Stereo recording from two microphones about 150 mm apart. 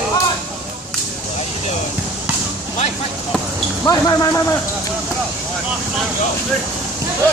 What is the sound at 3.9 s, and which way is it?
Speech, 25° left (ahead or behind).